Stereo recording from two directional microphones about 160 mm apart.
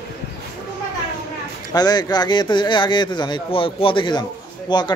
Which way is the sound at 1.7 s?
25° left (ahead or behind).